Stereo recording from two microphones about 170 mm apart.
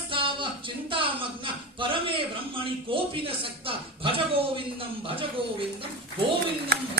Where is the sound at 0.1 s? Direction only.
30° right (ahead or behind).